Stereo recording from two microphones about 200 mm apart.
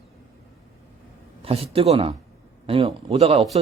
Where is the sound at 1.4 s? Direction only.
30° right (ahead or behind).